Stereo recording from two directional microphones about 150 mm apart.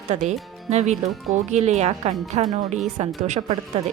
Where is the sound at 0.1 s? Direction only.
50° right (ahead or behind).